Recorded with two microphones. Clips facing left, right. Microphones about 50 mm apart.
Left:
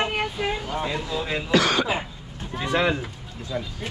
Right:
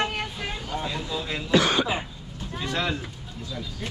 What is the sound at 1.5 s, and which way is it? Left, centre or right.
Speech, left.